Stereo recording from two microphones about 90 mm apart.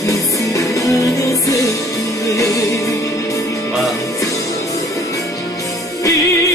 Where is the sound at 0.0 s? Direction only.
40° left (ahead or behind).